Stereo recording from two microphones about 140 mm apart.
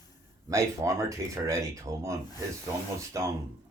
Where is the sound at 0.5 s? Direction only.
20° right (ahead or behind).